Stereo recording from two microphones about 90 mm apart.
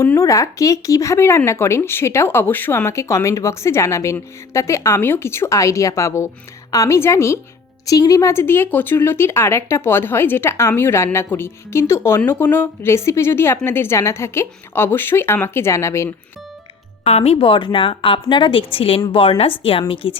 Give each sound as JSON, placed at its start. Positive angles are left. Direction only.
{"t": 0.0, "sound": "speech", "side_deg": 35}
{"t": 7.9, "sound": "speech", "side_deg": 40}
{"t": 17.3, "sound": "a woman's voice", "side_deg": 75}